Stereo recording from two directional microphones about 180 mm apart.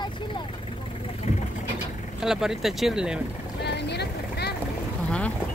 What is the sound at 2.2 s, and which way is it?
Speech, 5° right (ahead or behind).